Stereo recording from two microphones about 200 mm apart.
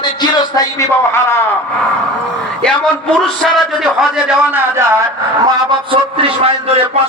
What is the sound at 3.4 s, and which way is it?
Speech, centre (ahead or behind).